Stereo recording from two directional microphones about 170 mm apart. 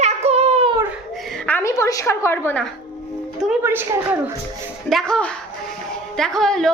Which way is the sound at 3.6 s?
15° right (ahead or behind).